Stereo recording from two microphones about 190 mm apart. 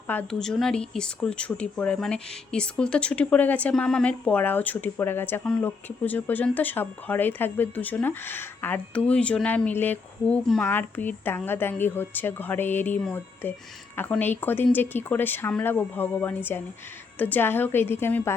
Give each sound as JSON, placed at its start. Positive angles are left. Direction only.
{"t": 0.1, "sound": "speech", "side_deg": 5}